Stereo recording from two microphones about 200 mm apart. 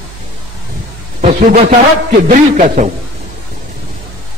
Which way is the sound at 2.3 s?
35° right (ahead or behind).